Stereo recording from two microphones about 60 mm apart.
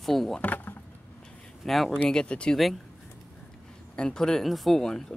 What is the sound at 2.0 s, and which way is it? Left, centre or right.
Speech, centre.